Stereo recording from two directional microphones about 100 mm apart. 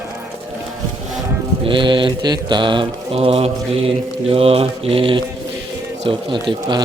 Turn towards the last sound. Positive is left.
turn(degrees=-55)  # may be behind; listen again after turning